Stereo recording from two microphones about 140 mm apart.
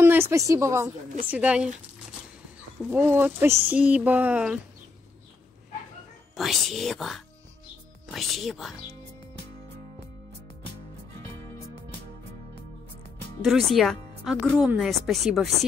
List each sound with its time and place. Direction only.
0.0 s a woman's voice: 15° right (ahead or behind)
1.3 s speech: 10° right (ahead or behind)
2.8 s speech: 15° right (ahead or behind)
6.3 s speech: centre (ahead or behind)
13.4 s speech: centre (ahead or behind)